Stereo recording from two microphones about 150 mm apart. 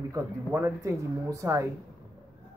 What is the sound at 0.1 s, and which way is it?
Speech, 15° right (ahead or behind).